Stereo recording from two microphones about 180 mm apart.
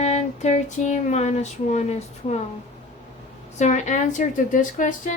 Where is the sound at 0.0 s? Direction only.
40° left (ahead or behind).